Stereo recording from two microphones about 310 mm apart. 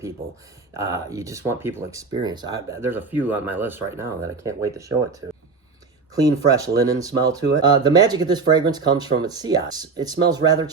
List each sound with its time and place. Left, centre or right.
0.8 s speech: centre
6.1 s speech: centre